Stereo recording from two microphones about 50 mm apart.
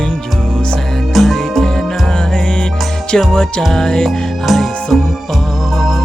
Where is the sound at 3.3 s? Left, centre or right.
Centre.